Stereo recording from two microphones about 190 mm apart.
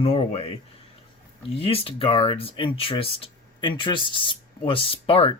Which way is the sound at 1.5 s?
30° left (ahead or behind).